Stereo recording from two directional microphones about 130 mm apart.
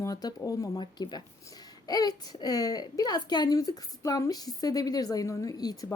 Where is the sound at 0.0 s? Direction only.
30° left (ahead or behind).